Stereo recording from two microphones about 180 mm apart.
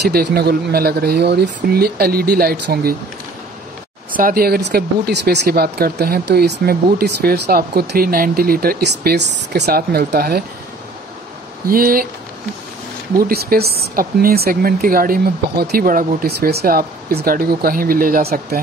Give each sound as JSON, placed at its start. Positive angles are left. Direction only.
{"t": 0.1, "sound": "speech", "side_deg": -55}
{"t": 4.1, "sound": "speech", "side_deg": -50}
{"t": 11.6, "sound": "speech", "side_deg": -55}
{"t": 13.3, "sound": "speech", "side_deg": -60}